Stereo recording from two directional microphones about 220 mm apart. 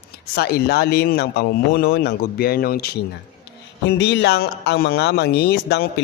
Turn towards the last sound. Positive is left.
turn(degrees=45)  # may be behind; listen again after turning